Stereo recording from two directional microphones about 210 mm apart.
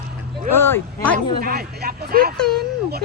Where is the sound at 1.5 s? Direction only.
45° right (ahead or behind).